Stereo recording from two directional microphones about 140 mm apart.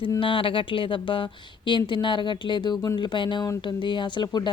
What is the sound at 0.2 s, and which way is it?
Speech, 40° left (ahead or behind).